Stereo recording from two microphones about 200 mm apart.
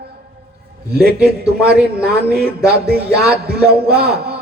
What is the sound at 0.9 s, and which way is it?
A man's voice, 50° right (ahead or behind).